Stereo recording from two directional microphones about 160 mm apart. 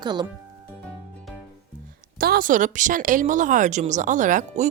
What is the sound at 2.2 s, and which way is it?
Speech, 65° right (ahead or behind).